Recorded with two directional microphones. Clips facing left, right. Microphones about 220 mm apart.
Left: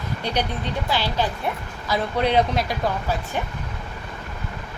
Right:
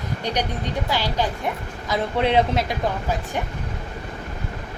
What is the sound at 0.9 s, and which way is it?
Speech, 15° right (ahead or behind).